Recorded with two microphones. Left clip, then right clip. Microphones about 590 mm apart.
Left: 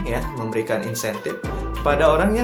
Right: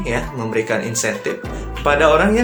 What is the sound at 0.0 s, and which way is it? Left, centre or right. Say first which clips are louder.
Speech: right 4 dB; left.